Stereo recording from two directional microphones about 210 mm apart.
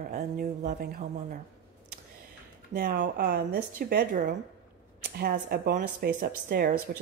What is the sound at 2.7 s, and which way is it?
A woman's voice, 50° right (ahead or behind).